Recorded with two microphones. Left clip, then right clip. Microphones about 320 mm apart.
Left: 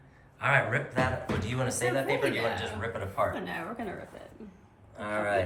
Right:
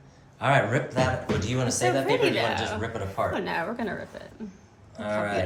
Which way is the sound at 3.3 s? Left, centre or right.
Right.